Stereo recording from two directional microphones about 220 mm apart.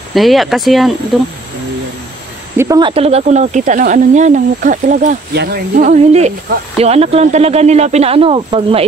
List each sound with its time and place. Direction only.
0.1 s speech: centre (ahead or behind)
2.5 s speech: 15° right (ahead or behind)